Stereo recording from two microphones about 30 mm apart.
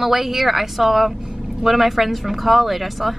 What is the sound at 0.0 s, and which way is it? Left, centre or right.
A woman's voice, centre.